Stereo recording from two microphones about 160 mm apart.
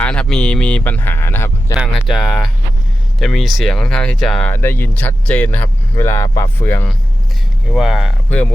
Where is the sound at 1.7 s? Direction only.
5° right (ahead or behind); by 6.8 s 15° left (ahead or behind).